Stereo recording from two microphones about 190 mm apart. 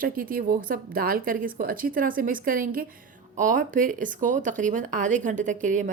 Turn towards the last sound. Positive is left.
turn(degrees=-40)  # may be behind; listen again after turning